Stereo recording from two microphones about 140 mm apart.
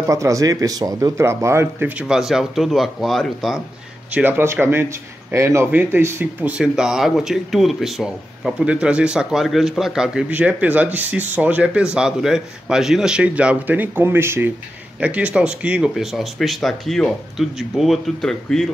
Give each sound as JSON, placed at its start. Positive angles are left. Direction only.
{"t": 0.0, "sound": "a man's voice", "side_deg": -20}
{"t": 4.1, "sound": "a man's voice", "side_deg": -15}